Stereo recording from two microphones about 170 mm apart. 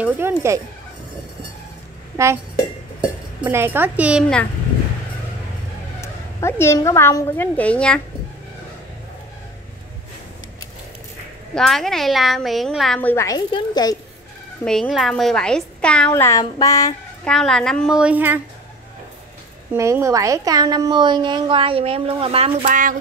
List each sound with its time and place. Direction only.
0.0 s speech: 15° right (ahead or behind)
3.0 s speech: 10° right (ahead or behind)
5.9 s a woman's voice: 15° left (ahead or behind)
11.5 s a woman's voice: centre (ahead or behind)
13.5 s child singing: 25° left (ahead or behind)
14.6 s a woman's voice: 5° left (ahead or behind)
16.2 s child singing: 20° left (ahead or behind)
17.2 s a woman's voice: 5° left (ahead or behind)
19.7 s a woman's voice: 15° right (ahead or behind); by 22.7 s 35° right (ahead or behind)
22.7 s speech: 55° right (ahead or behind)